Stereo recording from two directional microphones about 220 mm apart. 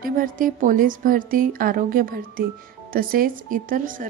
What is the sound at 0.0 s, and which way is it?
A woman's voice, 40° right (ahead or behind).